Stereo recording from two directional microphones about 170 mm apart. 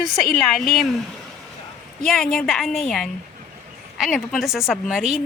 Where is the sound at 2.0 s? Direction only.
Centre (ahead or behind).